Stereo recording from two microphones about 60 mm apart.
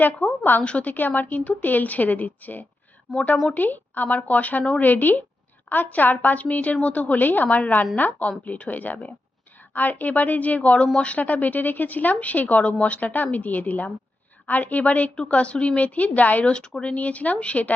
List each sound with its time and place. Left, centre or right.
0.0 s a woman's voice: left
3.1 s speech: centre
3.4 s a woman's voice: left